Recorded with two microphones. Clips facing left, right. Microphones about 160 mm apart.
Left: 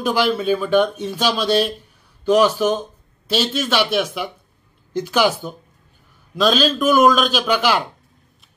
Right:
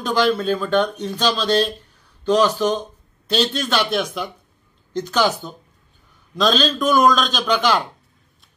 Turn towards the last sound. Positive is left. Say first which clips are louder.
# left 1 dB
turn(degrees=5)  # may be behind; listen again after turning